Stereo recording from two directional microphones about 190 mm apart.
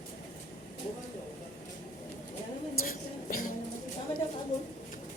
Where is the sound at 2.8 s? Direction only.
50° left (ahead or behind).